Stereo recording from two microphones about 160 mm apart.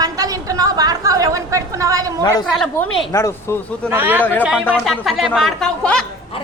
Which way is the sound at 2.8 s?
5° left (ahead or behind).